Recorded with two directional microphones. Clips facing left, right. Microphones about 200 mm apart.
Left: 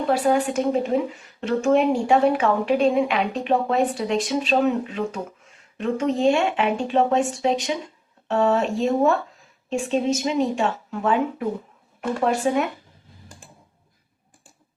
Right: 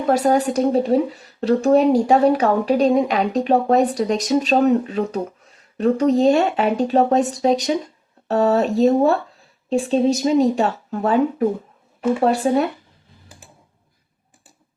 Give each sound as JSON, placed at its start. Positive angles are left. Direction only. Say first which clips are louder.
{"t": 0.1, "sound": "a woman's voice", "louder": "right 4 dB", "side_deg": -40}